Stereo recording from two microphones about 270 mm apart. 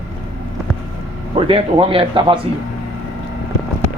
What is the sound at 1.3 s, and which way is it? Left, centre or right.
Speech, right.